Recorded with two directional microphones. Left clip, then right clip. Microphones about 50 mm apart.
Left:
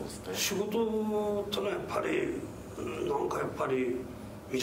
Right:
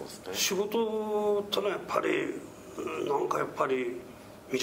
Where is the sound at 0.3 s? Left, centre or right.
Right.